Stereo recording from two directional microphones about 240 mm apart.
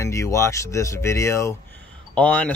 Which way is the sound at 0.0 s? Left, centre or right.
Centre.